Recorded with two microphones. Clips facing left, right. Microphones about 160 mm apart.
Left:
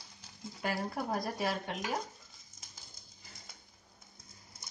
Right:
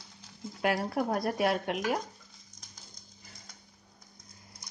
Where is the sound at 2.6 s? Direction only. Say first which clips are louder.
Right 1 dB; 5° left (ahead or behind).